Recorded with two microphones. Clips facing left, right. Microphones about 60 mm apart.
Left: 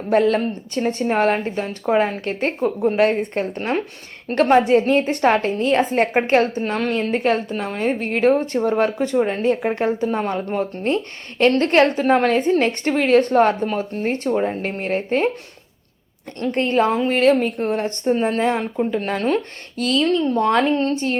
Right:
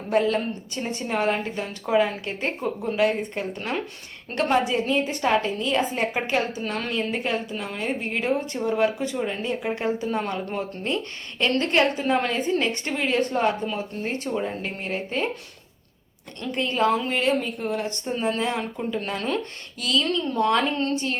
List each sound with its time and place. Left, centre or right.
0.1 s speech: left
16.4 s speech: left
16.8 s speech: left
17.2 s speech: left